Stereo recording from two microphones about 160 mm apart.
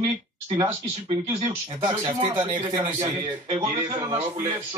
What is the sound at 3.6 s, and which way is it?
Speech, 30° right (ahead or behind).